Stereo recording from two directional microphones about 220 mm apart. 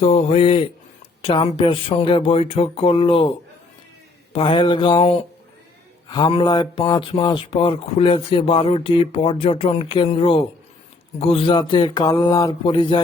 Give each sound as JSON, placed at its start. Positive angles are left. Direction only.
{"t": 0.0, "sound": "speech", "side_deg": 30}